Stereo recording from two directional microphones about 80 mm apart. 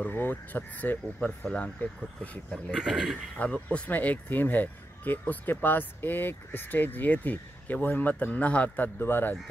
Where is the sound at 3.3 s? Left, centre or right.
Centre.